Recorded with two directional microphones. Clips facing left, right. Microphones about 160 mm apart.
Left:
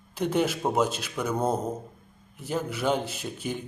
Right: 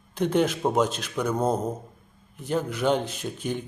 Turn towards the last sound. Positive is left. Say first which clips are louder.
# right 3 dB
turn(degrees=5)  # may be behind; listen again after turning